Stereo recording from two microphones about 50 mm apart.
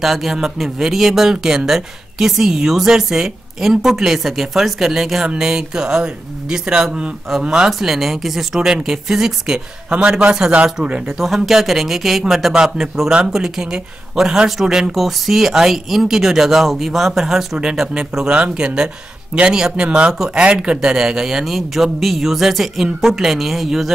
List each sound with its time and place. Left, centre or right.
0.0 s speech: centre
8.5 s a man's voice: centre
11.1 s speech: centre
17.6 s speech: centre